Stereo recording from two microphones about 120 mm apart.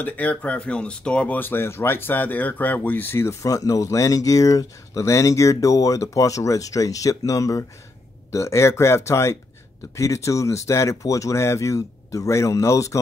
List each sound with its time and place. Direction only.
0.0 s speech: 15° left (ahead or behind)